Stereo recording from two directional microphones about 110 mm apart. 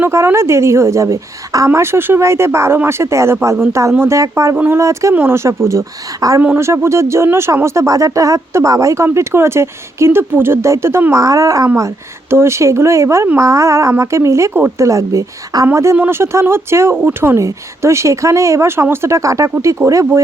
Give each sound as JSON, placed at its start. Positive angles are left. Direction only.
{"t": 0.0, "sound": "speech", "side_deg": -25}
{"t": 4.5, "sound": "speech", "side_deg": -15}
{"t": 4.8, "sound": "speech", "side_deg": -25}